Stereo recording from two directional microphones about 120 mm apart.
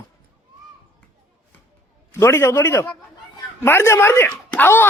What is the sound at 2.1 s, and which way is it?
A man's voice, 20° left (ahead or behind).